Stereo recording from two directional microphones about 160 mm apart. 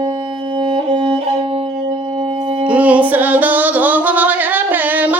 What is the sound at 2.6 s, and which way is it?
Singing, 10° right (ahead or behind).